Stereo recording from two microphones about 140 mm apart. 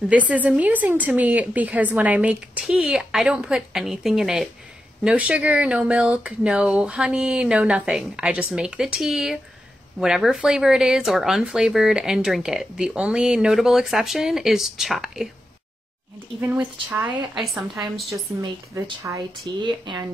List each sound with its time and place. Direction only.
0.3 s speech: 10° right (ahead or behind)
16.3 s speech: 10° right (ahead or behind)
19.0 s speech: 30° right (ahead or behind)